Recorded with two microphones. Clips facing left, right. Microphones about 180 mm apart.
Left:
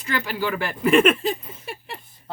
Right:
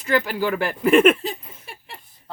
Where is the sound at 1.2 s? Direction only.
70° left (ahead or behind).